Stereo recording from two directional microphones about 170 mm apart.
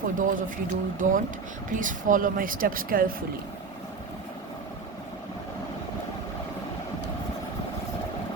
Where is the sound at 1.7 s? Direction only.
50° right (ahead or behind).